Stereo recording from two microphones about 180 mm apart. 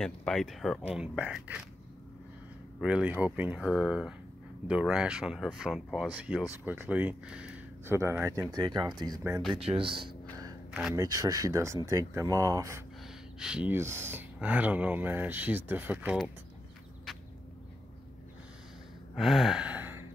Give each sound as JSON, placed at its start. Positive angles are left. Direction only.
{"t": 0.0, "sound": "speech", "side_deg": 5}
{"t": 2.8, "sound": "speech", "side_deg": -5}
{"t": 9.5, "sound": "speech", "side_deg": -30}
{"t": 10.7, "sound": "speech", "side_deg": 0}
{"t": 11.0, "sound": "speech", "side_deg": -20}
{"t": 13.4, "sound": "speech", "side_deg": -5}
{"t": 19.1, "sound": "gasp", "side_deg": 0}